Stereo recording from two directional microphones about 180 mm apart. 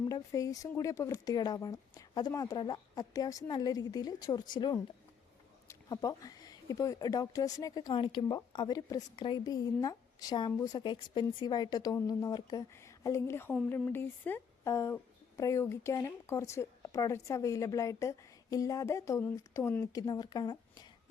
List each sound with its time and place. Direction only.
0.1 s a woman's voice: 20° left (ahead or behind)